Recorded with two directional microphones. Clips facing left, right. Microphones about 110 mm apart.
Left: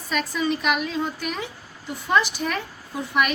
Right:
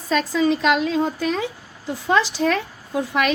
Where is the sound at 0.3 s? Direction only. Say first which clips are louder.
Right 5 dB; 90° right.